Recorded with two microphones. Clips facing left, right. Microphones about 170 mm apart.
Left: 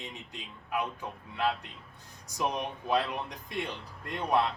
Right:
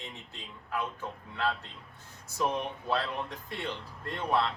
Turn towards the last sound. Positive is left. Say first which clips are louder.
# left 1 dB
turn(degrees=15)  # may be behind; listen again after turning